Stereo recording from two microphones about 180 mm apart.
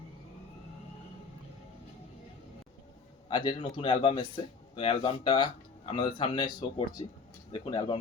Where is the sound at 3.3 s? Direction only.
25° left (ahead or behind).